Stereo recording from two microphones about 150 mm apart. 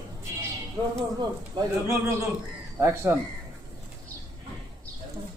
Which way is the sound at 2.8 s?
15° right (ahead or behind).